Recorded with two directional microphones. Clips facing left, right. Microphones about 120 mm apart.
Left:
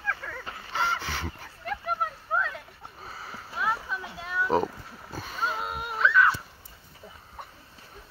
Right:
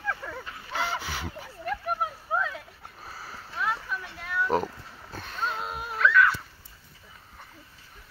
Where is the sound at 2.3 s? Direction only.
10° right (ahead or behind).